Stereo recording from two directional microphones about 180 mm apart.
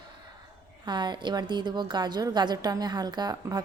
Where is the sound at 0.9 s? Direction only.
25° right (ahead or behind).